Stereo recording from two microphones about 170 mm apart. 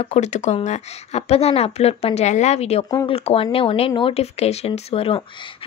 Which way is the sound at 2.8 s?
25° left (ahead or behind).